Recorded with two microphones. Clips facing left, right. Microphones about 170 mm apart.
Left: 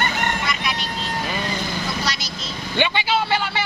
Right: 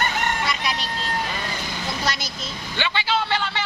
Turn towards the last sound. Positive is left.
turn(degrees=10)  # may be behind; listen again after turning